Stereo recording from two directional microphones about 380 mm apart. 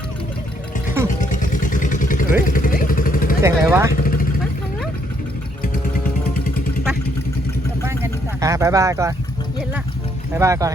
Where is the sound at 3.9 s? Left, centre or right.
Left.